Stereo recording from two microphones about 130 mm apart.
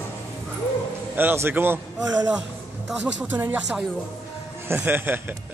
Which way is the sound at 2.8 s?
10° right (ahead or behind).